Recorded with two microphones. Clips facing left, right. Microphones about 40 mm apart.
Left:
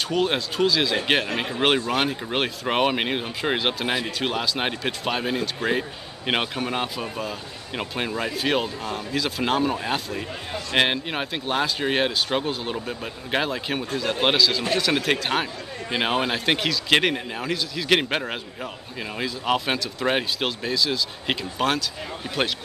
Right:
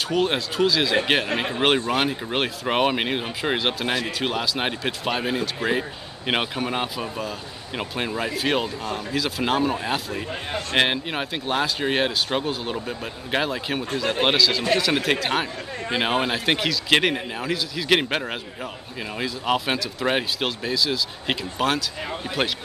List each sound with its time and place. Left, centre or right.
0.0 s speech: centre
1.3 s speech: right
1.9 s speech: centre